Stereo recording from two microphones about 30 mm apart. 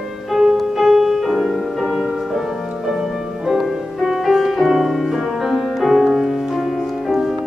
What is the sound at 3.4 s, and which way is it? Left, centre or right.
Music, centre.